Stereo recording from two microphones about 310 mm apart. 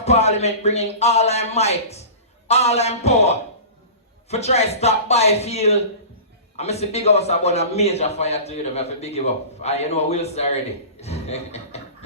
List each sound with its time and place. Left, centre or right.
0.0 s a man's voice: left